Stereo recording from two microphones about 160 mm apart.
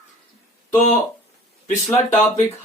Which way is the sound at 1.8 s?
45° left (ahead or behind).